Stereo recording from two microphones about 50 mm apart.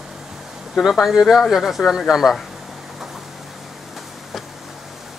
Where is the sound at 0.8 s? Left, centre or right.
Centre.